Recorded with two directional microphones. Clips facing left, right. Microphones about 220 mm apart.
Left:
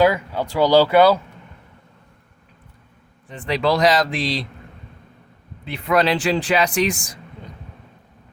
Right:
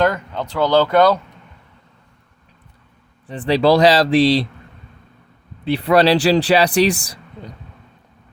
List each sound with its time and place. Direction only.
0.0 s speech: 10° left (ahead or behind)
3.2 s a man's voice: 35° right (ahead or behind)
5.6 s a man's voice: 35° right (ahead or behind)